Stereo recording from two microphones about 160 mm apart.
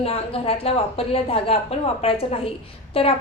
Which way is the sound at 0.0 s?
35° left (ahead or behind).